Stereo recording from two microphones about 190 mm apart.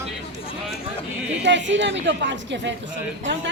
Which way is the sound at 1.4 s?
70° right (ahead or behind).